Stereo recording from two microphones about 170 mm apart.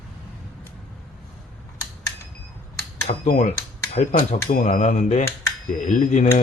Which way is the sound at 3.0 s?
45° left (ahead or behind).